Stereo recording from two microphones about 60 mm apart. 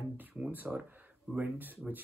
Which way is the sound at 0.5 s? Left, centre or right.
Right.